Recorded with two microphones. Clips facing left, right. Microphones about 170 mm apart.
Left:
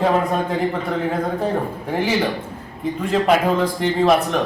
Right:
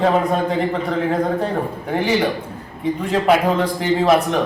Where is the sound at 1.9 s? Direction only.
Centre (ahead or behind).